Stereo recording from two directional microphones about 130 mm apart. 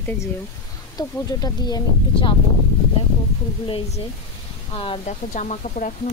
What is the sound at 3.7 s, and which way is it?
Speech, 50° left (ahead or behind).